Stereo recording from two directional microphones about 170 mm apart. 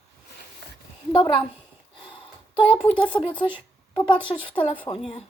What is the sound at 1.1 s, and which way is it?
Speech, 30° left (ahead or behind).